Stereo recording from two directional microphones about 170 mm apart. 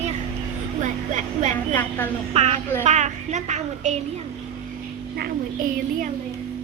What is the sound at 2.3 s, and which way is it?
A woman's voice, 40° right (ahead or behind).